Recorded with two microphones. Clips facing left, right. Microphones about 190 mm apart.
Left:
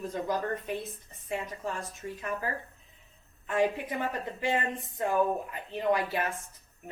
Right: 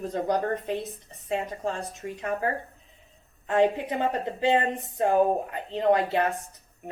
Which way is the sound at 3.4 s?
25° right (ahead or behind).